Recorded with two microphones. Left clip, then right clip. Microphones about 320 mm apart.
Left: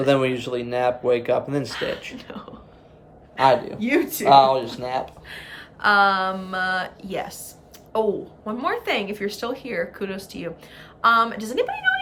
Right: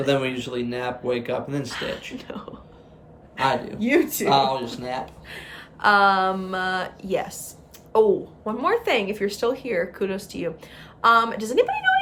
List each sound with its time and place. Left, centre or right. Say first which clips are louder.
0.0 s speech: left 3 dB; centre
1.7 s a woman's voice: left 2 dB; centre
3.8 s a woman's voice: right 1 dB; centre
4.3 s speech: left 8 dB; centre
5.3 s a woman's voice: left 1 dB; centre